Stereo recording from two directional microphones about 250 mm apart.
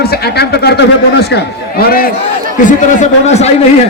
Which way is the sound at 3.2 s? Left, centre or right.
Left.